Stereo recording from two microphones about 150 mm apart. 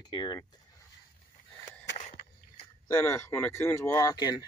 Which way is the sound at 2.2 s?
90° left.